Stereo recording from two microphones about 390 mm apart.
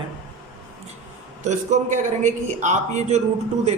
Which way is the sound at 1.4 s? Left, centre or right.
Centre.